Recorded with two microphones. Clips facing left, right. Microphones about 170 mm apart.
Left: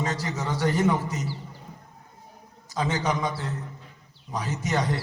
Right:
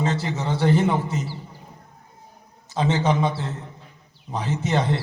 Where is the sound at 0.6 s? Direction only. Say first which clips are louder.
Right 3 dB; 25° right (ahead or behind).